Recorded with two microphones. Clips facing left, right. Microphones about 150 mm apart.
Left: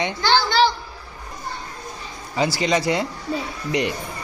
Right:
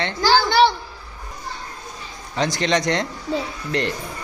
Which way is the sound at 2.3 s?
5° left (ahead or behind).